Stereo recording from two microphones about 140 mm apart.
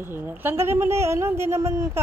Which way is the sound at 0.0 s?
15° right (ahead or behind).